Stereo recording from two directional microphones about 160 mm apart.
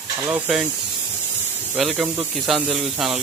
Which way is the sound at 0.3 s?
10° right (ahead or behind).